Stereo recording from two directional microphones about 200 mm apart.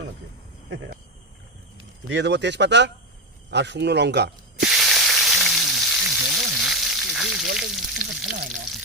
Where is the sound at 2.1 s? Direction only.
60° right (ahead or behind).